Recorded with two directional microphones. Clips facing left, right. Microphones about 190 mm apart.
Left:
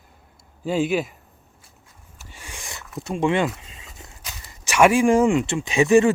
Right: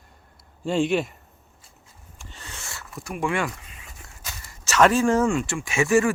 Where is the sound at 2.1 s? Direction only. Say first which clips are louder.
Left 1 dB; 10° left (ahead or behind).